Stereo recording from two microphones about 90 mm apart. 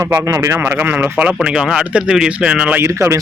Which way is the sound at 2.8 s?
30° right (ahead or behind).